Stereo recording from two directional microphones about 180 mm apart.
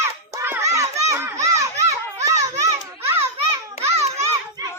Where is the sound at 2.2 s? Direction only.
15° right (ahead or behind).